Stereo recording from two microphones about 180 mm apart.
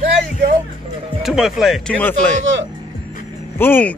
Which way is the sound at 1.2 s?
Centre (ahead or behind).